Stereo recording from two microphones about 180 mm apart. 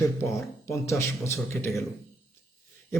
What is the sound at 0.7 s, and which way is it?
A man's voice, 15° left (ahead or behind).